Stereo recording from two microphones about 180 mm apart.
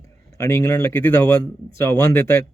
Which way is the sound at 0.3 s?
15° left (ahead or behind).